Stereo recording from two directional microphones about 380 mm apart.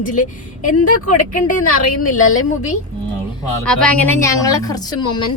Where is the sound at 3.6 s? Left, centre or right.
Centre.